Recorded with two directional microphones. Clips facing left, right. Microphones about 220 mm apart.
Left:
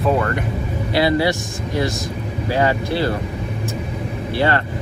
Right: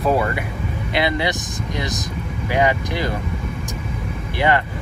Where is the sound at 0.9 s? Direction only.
20° right (ahead or behind).